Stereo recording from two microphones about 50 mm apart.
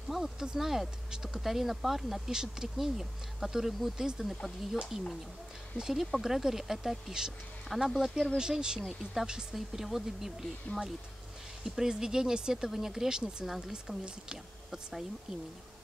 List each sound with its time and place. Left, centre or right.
0.1 s speech: centre
10.7 s speech: left
11.6 s speech: centre